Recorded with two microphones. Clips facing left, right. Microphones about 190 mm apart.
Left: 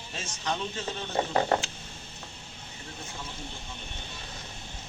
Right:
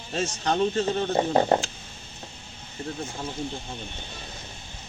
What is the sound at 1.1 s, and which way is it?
Speech, 30° right (ahead or behind).